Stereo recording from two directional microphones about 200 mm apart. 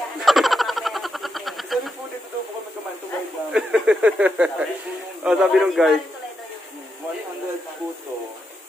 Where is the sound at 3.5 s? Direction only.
5° right (ahead or behind).